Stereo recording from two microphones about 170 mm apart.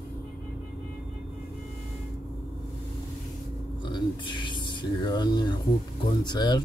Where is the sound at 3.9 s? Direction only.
25° left (ahead or behind).